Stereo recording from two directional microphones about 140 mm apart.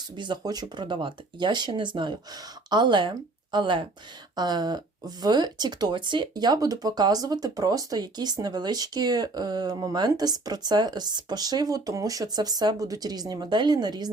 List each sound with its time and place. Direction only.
0.2 s speech: 30° right (ahead or behind)